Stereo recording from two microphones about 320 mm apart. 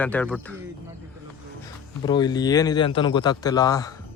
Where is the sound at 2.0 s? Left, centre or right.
Centre.